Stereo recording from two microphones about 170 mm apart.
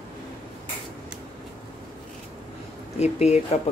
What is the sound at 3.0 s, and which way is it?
Speech, 40° left (ahead or behind).